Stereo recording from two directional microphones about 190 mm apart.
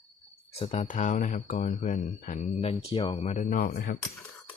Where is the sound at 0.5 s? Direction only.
35° left (ahead or behind); by 3.9 s 50° left (ahead or behind).